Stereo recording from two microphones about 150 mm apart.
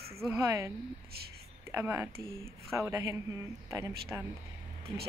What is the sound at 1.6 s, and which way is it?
Speech, 15° right (ahead or behind).